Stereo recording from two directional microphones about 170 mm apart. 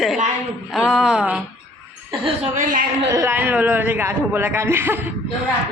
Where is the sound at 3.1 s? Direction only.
15° right (ahead or behind).